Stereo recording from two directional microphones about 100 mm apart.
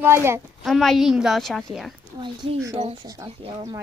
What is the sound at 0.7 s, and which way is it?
A woman's voice, centre (ahead or behind).